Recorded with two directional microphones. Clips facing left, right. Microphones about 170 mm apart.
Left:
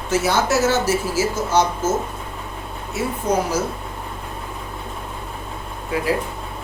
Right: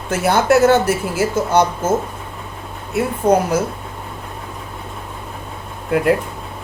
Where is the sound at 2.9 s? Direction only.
60° right (ahead or behind).